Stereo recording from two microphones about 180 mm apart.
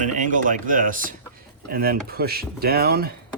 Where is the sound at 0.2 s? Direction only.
45° right (ahead or behind).